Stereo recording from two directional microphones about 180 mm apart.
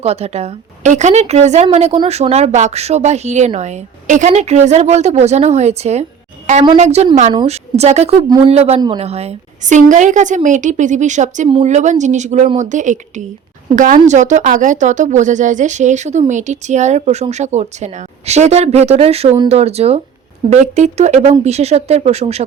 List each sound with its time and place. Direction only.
0.0 s a woman's voice: 35° right (ahead or behind)